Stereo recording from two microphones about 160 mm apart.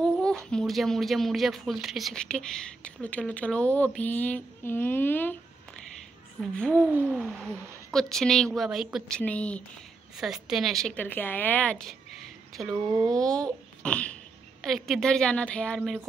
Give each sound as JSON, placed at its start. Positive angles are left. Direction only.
{"t": 0.5, "sound": "speech", "side_deg": 5}
{"t": 6.4, "sound": "speech", "side_deg": 5}
{"t": 6.9, "sound": "hoot", "side_deg": -10}
{"t": 7.2, "sound": "speech", "side_deg": 0}
{"t": 10.1, "sound": "a woman's voice", "side_deg": 0}